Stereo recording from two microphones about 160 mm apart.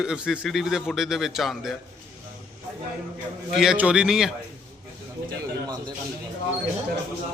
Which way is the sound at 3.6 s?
5° right (ahead or behind).